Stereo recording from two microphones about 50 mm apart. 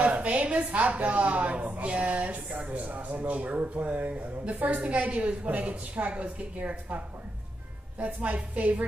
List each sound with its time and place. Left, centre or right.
0.0 s a woman's voice: right
8.0 s a woman's voice: right